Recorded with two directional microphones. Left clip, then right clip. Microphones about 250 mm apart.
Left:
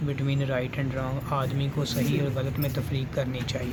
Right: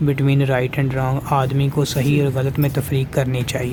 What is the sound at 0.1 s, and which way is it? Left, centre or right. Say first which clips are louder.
Speech: right 10 dB; right.